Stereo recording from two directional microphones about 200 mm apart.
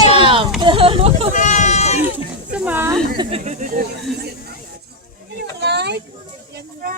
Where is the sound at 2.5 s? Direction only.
10° right (ahead or behind).